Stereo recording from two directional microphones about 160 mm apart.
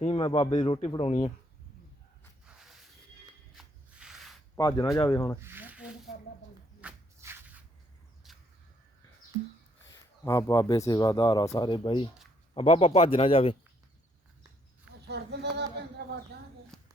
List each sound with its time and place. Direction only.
0.0 s speech: 35° left (ahead or behind)
3.6 s rub: 5° right (ahead or behind)
4.5 s speech: 20° left (ahead or behind)
5.4 s speech: 15° right (ahead or behind)
6.8 s shuffle: 10° right (ahead or behind)
8.2 s a sound: centre (ahead or behind)
9.9 s speech: 20° left (ahead or behind)
12.5 s speech: 40° left (ahead or behind)
15.0 s speech: 90° right
16.7 s a sound: 5° left (ahead or behind)